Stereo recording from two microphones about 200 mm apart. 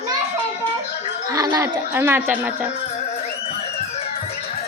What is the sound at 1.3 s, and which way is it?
Speech, 20° right (ahead or behind).